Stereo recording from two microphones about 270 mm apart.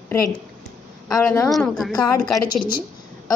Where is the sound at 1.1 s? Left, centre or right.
Centre.